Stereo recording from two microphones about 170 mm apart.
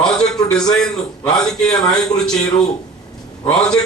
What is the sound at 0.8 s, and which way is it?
A man's voice, 5° left (ahead or behind).